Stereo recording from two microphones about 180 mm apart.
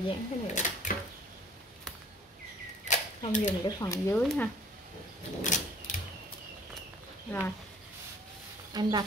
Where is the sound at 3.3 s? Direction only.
45° left (ahead or behind).